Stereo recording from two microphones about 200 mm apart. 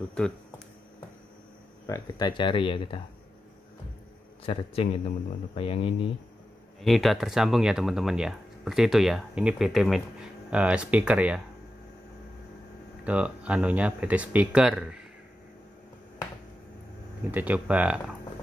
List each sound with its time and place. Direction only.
0.2 s speech: 5° left (ahead or behind)
1.9 s speech: 20° left (ahead or behind)
4.5 s speech: 25° left (ahead or behind)
6.8 s speech: centre (ahead or behind)
13.0 s speech: 5° right (ahead or behind)
17.3 s speech: 10° right (ahead or behind)